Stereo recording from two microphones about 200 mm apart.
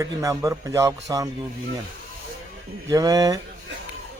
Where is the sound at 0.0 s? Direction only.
15° right (ahead or behind).